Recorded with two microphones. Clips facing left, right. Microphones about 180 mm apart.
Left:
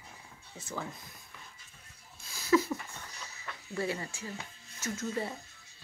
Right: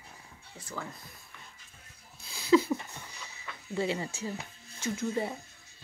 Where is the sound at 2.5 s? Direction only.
20° right (ahead or behind).